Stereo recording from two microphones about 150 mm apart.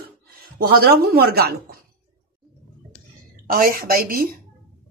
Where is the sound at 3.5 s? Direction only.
70° right (ahead or behind).